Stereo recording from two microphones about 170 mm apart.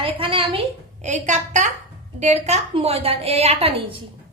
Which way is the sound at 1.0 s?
45° right (ahead or behind).